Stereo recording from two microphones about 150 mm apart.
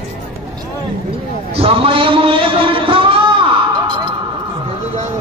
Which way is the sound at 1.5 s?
40° right (ahead or behind).